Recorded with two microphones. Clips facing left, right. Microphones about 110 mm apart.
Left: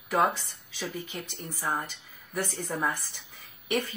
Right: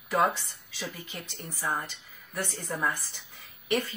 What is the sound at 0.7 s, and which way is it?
Speech, 10° left (ahead or behind).